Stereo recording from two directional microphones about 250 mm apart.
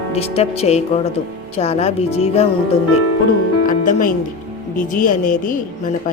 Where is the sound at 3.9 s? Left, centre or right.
Left.